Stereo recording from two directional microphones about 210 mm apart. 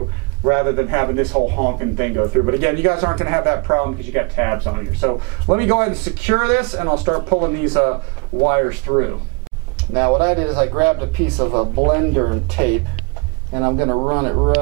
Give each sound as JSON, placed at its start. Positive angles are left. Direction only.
{"t": 0.5, "sound": "speech", "side_deg": -20}
{"t": 1.3, "sound": "a man's voice", "side_deg": -30}
{"t": 2.0, "sound": "speech", "side_deg": -20}
{"t": 4.6, "sound": "speech", "side_deg": -30}
{"t": 5.6, "sound": "speech", "side_deg": -15}